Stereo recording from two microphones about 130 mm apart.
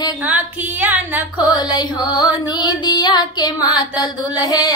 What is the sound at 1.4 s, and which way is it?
Music, 30° left (ahead or behind).